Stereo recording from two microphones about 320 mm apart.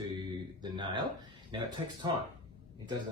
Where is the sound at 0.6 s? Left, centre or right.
Centre.